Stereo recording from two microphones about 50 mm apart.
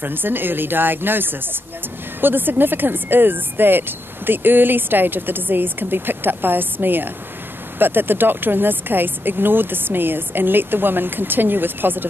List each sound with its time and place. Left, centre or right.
0.0 s speech: right